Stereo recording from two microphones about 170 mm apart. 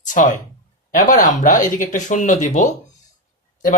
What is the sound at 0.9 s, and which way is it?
Speech, 50° left (ahead or behind).